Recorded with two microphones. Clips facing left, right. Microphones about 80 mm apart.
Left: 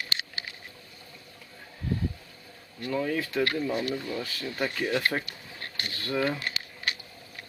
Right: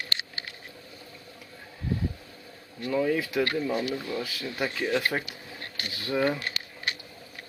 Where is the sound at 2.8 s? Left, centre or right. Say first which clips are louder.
Right 3 dB; centre.